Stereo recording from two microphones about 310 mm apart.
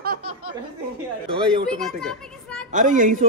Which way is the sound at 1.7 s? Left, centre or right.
Centre.